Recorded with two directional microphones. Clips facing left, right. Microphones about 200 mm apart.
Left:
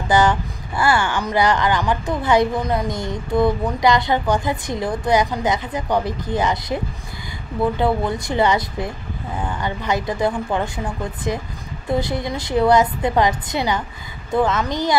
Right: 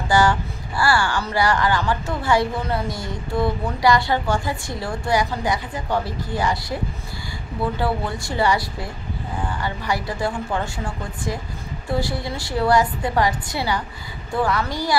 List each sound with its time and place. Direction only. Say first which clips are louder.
0.1 s speech: left 2 dB; 20° left (ahead or behind)
7.8 s speech: left 4 dB; 20° left (ahead or behind)